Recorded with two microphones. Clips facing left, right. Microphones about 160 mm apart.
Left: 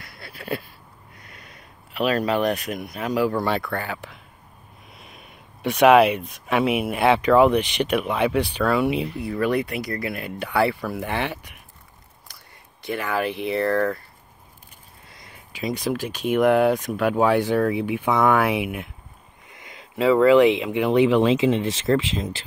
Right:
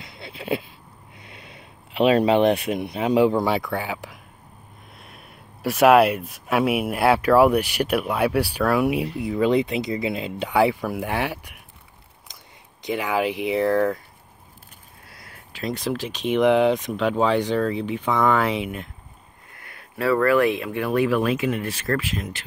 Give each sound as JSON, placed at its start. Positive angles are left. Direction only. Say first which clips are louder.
{"t": 0.0, "sound": "a sound", "louder": "right 3 dB", "side_deg": -20}
{"t": 1.3, "sound": "speech", "louder": "right 4 dB", "side_deg": -25}
{"t": 4.9, "sound": "speech", "louder": "even", "side_deg": 0}
{"t": 12.8, "sound": "speech", "louder": "right 2 dB", "side_deg": -15}
{"t": 15.0, "sound": "a sound", "louder": "even", "side_deg": -5}
{"t": 15.5, "sound": "speech", "louder": "left 1 dB", "side_deg": 5}